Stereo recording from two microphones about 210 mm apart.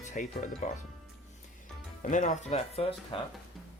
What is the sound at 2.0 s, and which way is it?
Speech, 35° left (ahead or behind).